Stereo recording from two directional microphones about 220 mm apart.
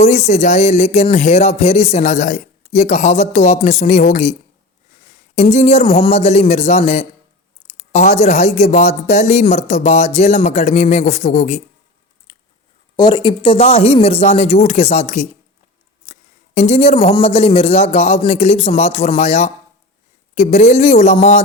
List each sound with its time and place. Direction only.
0.0 s a man's voice: 30° left (ahead or behind)
12.3 s biting: 20° left (ahead or behind)
13.0 s a man's voice: 20° left (ahead or behind)
16.1 s a sound: 30° left (ahead or behind)
16.6 s a man's voice: 30° left (ahead or behind)